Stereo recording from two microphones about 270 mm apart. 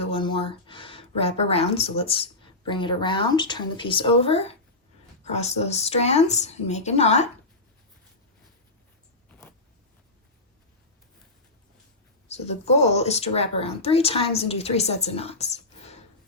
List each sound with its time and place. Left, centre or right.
0.0 s speech: centre
12.3 s speech: left